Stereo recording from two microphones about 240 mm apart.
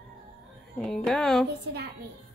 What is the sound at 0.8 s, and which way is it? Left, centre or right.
Speech, centre.